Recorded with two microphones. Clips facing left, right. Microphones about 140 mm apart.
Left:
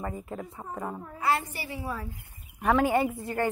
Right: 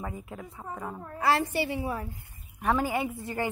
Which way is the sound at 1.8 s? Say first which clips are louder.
Right 3 dB; 15° right (ahead or behind).